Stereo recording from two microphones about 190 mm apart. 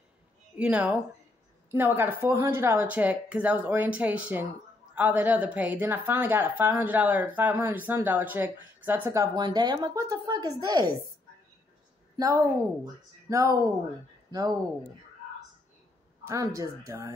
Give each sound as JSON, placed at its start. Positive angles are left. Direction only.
{"t": 0.6, "sound": "a woman's voice", "side_deg": -5}
{"t": 12.2, "sound": "a woman's voice", "side_deg": -15}
{"t": 16.3, "sound": "a woman's voice", "side_deg": -15}